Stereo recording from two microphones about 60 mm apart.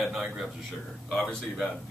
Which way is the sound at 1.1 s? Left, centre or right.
Centre.